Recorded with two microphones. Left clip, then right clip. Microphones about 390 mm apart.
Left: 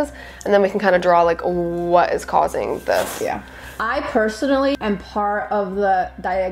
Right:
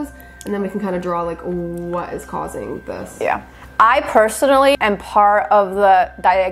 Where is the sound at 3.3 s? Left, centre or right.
Right.